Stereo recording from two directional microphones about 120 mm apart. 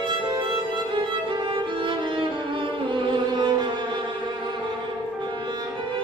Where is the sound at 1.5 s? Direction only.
45° right (ahead or behind).